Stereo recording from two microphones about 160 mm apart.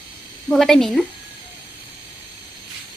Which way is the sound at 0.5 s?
Centre (ahead or behind).